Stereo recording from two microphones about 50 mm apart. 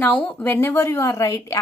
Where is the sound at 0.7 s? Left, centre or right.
Left.